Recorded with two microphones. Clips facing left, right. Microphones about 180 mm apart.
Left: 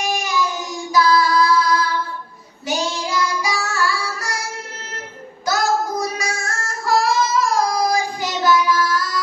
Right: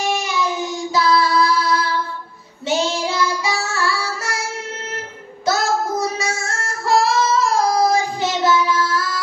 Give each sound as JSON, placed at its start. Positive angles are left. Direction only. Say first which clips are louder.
{"t": 0.0, "sound": "child singing", "louder": "right 1 dB", "side_deg": -25}
{"t": 5.5, "sound": "female singing", "louder": "right 1 dB", "side_deg": -25}